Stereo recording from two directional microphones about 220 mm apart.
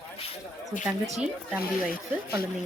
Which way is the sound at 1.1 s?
5° right (ahead or behind).